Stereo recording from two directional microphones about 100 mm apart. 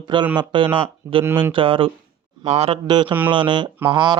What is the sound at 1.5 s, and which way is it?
Mantra, 60° right (ahead or behind).